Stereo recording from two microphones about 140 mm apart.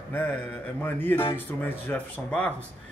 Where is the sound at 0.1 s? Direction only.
15° left (ahead or behind).